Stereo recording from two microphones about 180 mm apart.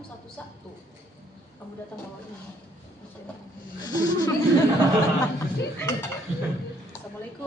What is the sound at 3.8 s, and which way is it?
Speech, 20° left (ahead or behind).